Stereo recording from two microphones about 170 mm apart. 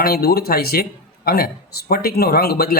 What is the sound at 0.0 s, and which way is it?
A man's voice, 65° left (ahead or behind).